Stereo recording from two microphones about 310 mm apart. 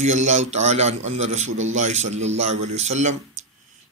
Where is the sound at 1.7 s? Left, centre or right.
Right.